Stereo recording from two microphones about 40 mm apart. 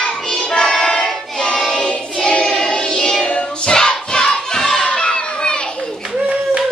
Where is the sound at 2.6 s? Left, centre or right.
Centre.